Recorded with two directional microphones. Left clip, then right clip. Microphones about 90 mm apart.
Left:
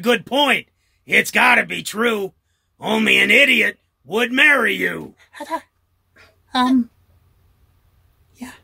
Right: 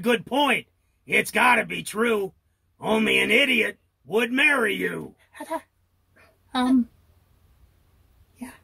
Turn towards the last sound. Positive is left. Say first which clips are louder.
# left 6 dB
turn(degrees=15)  # may be behind; listen again after turning